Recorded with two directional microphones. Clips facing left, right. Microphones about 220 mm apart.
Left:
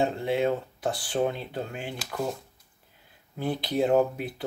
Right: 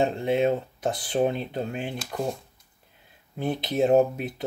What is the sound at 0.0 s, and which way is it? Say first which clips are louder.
Speech: right 3 dB; 20° right (ahead or behind).